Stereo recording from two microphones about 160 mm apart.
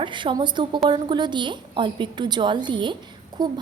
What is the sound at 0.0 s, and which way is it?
Speech, 30° right (ahead or behind).